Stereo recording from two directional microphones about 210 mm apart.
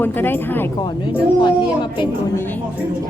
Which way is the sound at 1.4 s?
20° left (ahead or behind).